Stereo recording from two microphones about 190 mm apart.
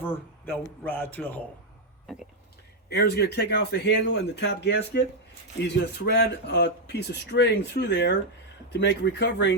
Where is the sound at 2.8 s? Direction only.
60° left (ahead or behind).